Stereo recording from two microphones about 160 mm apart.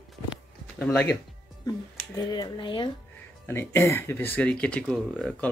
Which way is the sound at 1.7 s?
20° left (ahead or behind).